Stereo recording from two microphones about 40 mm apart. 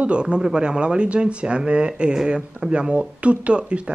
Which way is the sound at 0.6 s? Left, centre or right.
Right.